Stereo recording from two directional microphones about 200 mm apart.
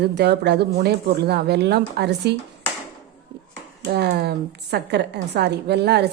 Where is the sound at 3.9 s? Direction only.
55° right (ahead or behind).